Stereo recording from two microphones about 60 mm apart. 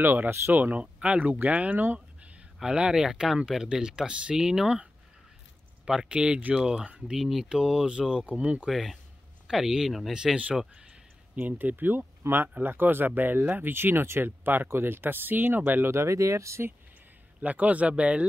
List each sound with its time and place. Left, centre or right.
0.0 s speech: right
0.9 s speech: centre
2.6 s speech: centre
5.9 s speech: centre
7.2 s speech: centre; by 8.6 s right
8.6 s speech: centre
10.1 s speech: centre
11.3 s speech: right
15.9 s speech: right
17.4 s speech: right